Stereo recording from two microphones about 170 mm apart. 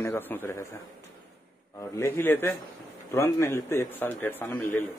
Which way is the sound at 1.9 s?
15° left (ahead or behind).